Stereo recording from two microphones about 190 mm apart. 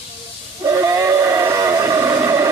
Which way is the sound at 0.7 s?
15° right (ahead or behind).